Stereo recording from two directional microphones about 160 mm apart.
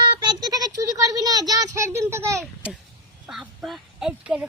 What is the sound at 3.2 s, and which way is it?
Goose, 5° right (ahead or behind).